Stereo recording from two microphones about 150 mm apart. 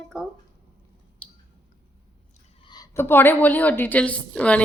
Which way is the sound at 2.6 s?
30° left (ahead or behind).